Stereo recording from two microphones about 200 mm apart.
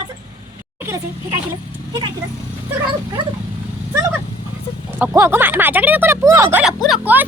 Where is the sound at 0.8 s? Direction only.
10° right (ahead or behind).